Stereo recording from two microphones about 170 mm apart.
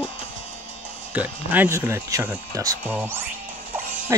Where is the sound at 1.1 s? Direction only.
10° right (ahead or behind).